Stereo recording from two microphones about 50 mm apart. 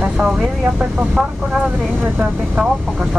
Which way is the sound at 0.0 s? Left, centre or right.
Centre.